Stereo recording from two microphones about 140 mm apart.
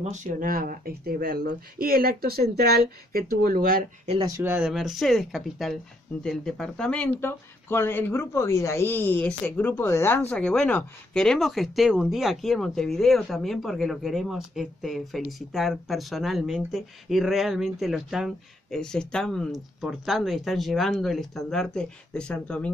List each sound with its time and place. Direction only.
0.0 s speech: 60° right (ahead or behind); by 4.1 s 90° right
4.4 s speech: 10° right (ahead or behind); by 10.2 s 20° left (ahead or behind)
10.3 s speech: 5° left (ahead or behind)